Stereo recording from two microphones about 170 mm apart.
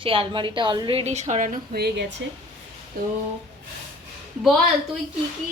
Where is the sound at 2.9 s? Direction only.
60° right (ahead or behind).